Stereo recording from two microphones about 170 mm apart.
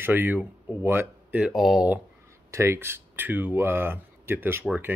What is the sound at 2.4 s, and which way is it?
Speech, 15° right (ahead or behind).